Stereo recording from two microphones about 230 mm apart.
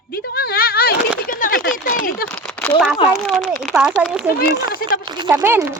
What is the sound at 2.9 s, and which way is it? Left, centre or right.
Speech, centre.